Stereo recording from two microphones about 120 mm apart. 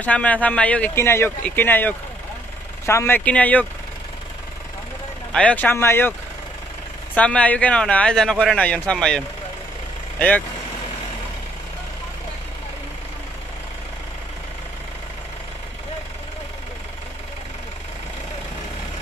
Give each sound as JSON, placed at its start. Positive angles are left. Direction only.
{"t": 0.0, "sound": "a man's voice", "side_deg": 10}
{"t": 3.3, "sound": "a man's voice", "side_deg": 10}
{"t": 5.3, "sound": "a man's voice", "side_deg": 10}
{"t": 7.2, "sound": "a man's voice", "side_deg": 10}